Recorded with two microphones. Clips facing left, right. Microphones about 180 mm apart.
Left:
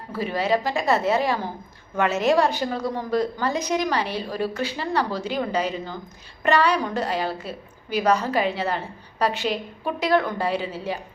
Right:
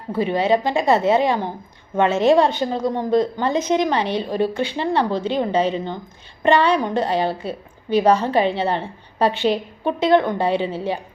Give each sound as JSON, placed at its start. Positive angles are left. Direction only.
{"t": 0.1, "sound": "a woman's voice", "side_deg": -25}